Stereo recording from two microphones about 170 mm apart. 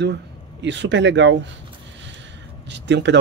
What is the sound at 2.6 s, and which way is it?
Speech, 90° right.